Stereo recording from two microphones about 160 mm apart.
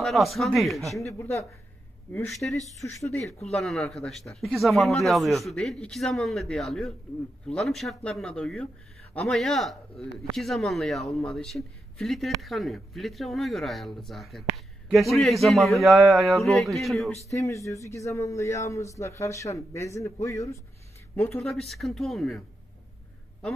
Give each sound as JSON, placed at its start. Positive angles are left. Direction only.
{"t": 0.0, "sound": "speech", "side_deg": 0}
{"t": 1.1, "sound": "a man's voice", "side_deg": 15}
{"t": 3.5, "sound": "speech", "side_deg": 0}
{"t": 17.3, "sound": "a man's voice", "side_deg": 20}
{"t": 21.5, "sound": "speech", "side_deg": 0}